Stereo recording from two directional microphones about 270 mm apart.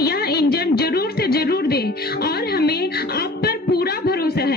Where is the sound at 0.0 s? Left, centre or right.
Left.